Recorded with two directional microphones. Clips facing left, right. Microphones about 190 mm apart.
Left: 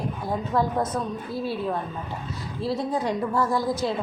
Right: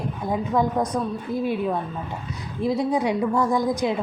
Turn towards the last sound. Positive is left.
turn(degrees=-15)  # may be behind; listen again after turning